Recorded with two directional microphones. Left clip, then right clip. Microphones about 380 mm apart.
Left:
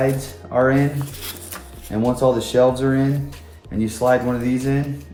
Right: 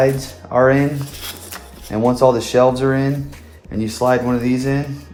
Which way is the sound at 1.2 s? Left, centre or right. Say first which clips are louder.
Right 3 dB; centre.